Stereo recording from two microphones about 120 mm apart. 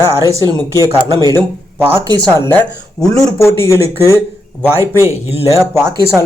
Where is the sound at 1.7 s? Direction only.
20° right (ahead or behind).